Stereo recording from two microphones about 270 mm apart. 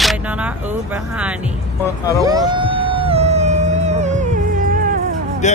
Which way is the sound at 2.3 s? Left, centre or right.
Centre.